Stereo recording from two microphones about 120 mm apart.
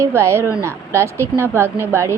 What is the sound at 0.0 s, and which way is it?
A woman's voice, 25° right (ahead or behind).